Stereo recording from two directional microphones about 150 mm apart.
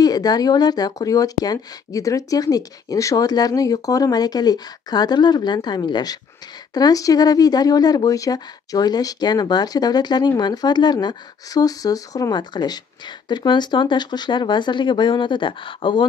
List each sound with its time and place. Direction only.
0.0 s speech: 25° left (ahead or behind)